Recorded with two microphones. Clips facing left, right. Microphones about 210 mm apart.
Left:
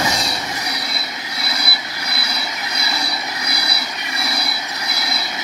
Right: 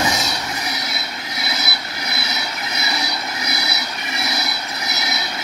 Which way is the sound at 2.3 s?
Centre (ahead or behind).